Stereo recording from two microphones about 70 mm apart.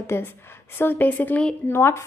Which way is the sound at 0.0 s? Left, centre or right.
Left.